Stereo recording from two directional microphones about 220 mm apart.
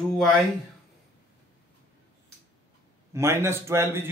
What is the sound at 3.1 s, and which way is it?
A man's voice, 10° right (ahead or behind).